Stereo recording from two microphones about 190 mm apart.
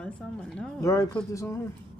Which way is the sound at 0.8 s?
15° left (ahead or behind).